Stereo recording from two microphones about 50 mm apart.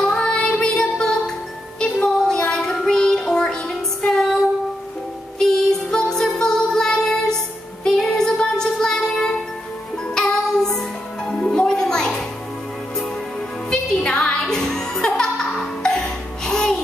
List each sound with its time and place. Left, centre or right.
0.0 s music: centre
2.0 s child singing: centre
5.4 s music: centre
13.7 s music: centre
14.4 s music: centre